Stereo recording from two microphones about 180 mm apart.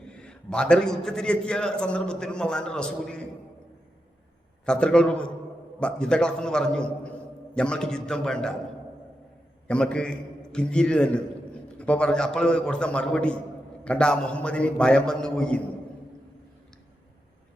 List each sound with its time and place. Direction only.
0.1 s a man's voice: 5° left (ahead or behind)
4.6 s a man's voice: 5° left (ahead or behind)
9.6 s a man's voice: 5° left (ahead or behind)